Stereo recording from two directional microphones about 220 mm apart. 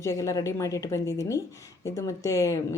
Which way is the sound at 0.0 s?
15° left (ahead or behind).